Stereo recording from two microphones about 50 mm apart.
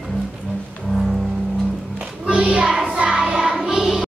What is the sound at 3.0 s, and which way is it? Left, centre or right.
Choir, centre.